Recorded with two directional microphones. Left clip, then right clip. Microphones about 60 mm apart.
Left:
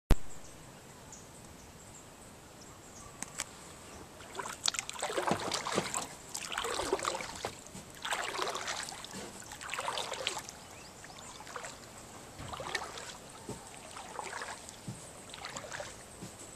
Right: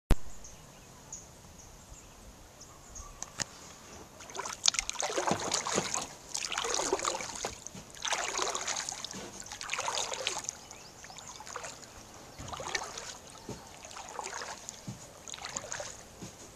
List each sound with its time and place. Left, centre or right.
4.3 s boat: right
5.0 s boat: right
6.3 s boat: right
6.6 s boat: right